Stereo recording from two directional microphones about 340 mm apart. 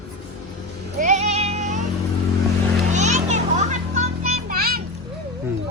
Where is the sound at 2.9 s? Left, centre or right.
Right.